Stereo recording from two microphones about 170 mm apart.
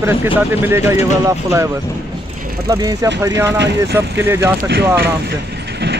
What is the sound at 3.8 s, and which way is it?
Speech, 15° right (ahead or behind).